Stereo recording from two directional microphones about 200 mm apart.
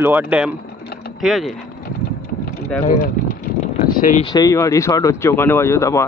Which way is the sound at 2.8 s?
40° left (ahead or behind).